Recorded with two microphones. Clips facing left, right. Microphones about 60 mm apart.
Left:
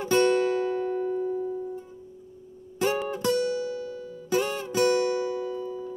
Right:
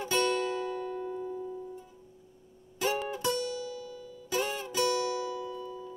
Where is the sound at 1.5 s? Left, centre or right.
Left.